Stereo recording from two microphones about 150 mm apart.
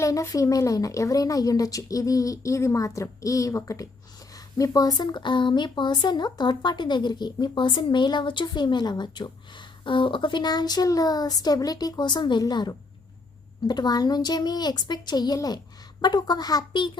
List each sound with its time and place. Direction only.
0.0 s speech: 20° left (ahead or behind)